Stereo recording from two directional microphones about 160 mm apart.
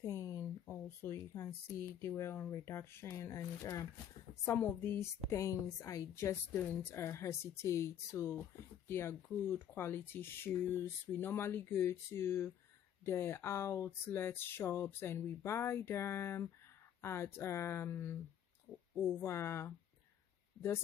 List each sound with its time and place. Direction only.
0.0 s speech: 20° left (ahead or behind)